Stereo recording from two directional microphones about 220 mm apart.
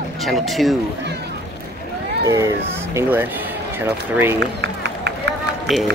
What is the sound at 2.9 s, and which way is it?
Speech, 10° right (ahead or behind).